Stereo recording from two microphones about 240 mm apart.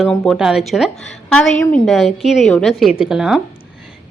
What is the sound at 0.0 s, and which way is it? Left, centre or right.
A woman's voice, centre.